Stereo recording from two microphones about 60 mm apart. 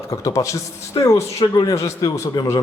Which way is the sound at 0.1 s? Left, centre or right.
Left.